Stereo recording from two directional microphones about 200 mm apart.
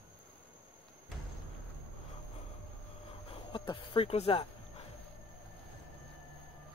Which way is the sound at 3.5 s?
25° left (ahead or behind).